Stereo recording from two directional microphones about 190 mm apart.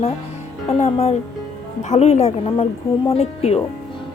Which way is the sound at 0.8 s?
35° left (ahead or behind).